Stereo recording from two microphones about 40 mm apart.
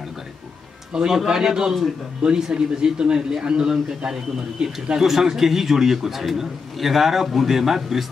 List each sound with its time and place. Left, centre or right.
0.9 s a man's voice: centre